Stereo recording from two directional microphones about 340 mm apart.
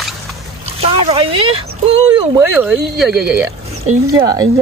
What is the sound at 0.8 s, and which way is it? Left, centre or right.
Speech, centre.